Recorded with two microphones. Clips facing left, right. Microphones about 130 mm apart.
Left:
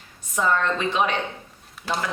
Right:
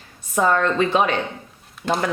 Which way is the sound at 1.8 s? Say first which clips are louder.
Right 7 dB; centre (ahead or behind).